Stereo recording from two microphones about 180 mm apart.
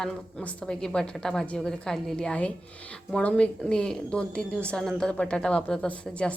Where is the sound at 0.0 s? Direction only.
5° left (ahead or behind).